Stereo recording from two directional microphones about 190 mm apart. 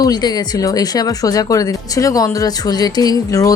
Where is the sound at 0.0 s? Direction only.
20° left (ahead or behind).